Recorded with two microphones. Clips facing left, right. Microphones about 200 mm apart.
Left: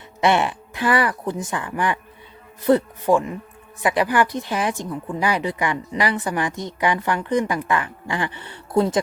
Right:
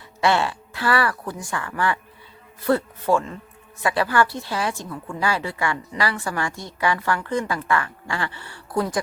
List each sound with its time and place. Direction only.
0.2 s speech: 20° left (ahead or behind)